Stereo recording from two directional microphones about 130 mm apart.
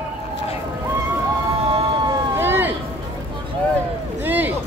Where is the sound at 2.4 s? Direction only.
15° right (ahead or behind).